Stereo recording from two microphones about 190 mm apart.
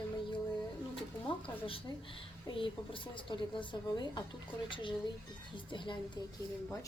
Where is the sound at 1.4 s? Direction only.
30° left (ahead or behind).